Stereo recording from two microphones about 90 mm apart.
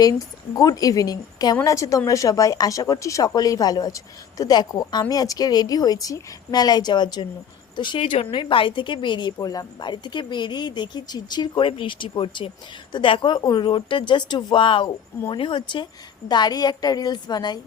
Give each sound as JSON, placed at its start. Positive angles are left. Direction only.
{"t": 0.5, "sound": "speech", "side_deg": 45}
{"t": 16.3, "sound": "speech", "side_deg": 50}